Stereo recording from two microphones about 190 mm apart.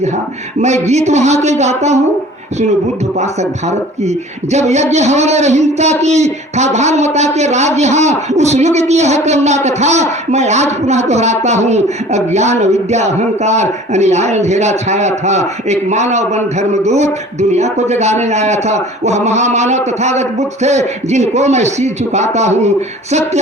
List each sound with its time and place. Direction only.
0.6 s a man's voice: 35° right (ahead or behind)
4.5 s a man's voice: 35° right (ahead or behind)